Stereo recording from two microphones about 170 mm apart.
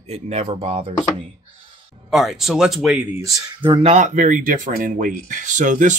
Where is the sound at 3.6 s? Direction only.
30° right (ahead or behind).